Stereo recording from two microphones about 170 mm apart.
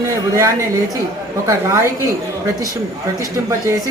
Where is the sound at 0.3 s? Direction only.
15° right (ahead or behind).